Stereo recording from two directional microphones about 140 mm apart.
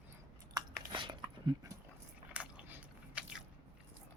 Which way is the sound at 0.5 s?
30° right (ahead or behind).